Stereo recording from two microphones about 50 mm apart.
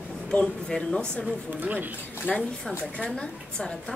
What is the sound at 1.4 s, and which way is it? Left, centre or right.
Speech, right.